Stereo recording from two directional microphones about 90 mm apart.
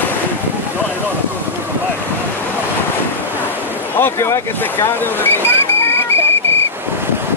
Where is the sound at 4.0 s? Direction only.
30° left (ahead or behind).